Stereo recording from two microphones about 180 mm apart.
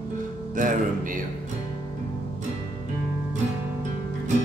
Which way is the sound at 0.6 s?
50° right (ahead or behind).